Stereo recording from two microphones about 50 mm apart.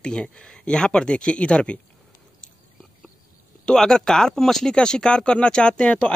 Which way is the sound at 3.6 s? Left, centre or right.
Centre.